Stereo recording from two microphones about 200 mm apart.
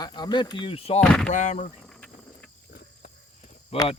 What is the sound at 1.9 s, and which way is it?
Cricket, 5° left (ahead or behind).